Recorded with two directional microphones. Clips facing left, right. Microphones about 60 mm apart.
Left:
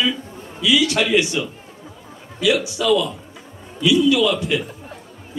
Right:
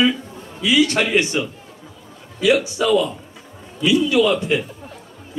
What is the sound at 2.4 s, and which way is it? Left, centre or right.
Speech, right.